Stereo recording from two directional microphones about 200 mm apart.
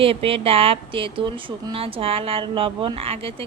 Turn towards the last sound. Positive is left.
turn(degrees=-30)  # may be behind; listen again after turning